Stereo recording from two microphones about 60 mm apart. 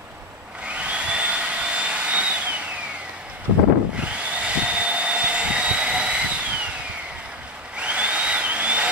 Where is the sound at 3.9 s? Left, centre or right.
Centre.